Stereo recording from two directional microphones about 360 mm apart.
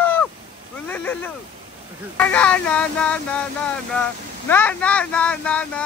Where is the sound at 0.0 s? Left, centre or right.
Centre.